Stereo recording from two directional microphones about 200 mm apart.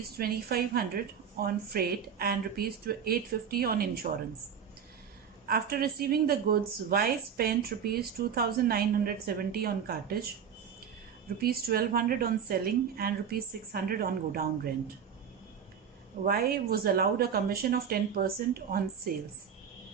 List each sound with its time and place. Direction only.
0.2 s a woman's voice: 50° right (ahead or behind)
5.5 s a woman's voice: 50° right (ahead or behind)
11.3 s a woman's voice: 50° right (ahead or behind)
16.2 s a woman's voice: 50° right (ahead or behind)